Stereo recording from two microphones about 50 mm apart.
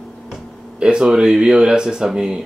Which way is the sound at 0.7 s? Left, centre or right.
Centre.